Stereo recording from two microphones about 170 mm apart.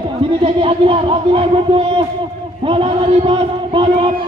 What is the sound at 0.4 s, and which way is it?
Speech, 35° right (ahead or behind).